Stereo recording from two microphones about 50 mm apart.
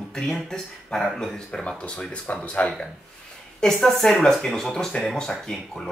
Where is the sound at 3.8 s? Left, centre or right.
Centre.